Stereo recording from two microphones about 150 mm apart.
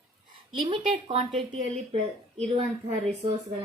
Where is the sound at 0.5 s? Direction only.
35° right (ahead or behind).